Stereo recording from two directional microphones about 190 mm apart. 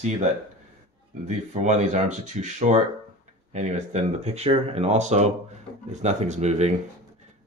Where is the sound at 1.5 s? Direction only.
40° right (ahead or behind).